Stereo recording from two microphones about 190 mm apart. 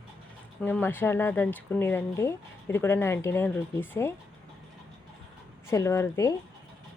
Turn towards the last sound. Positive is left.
turn(degrees=15)  # may be behind; listen again after turning